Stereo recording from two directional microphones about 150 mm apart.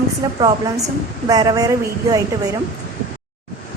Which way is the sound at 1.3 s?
25° right (ahead or behind).